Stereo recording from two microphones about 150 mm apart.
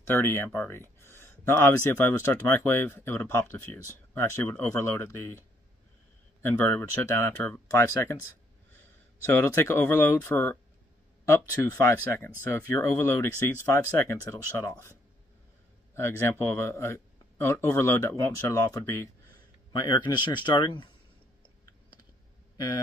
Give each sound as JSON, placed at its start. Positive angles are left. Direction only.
{"t": 0.0, "sound": "speech", "side_deg": 15}
{"t": 6.4, "sound": "speech", "side_deg": 15}
{"t": 9.2, "sound": "speech", "side_deg": 15}
{"t": 15.9, "sound": "speech", "side_deg": 15}
{"t": 19.7, "sound": "speech", "side_deg": 30}